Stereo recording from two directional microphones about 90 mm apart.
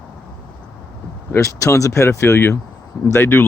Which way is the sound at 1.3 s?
35° left (ahead or behind).